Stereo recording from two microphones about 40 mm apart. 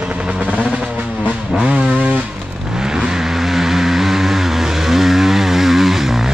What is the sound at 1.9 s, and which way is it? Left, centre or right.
Vehicle, right.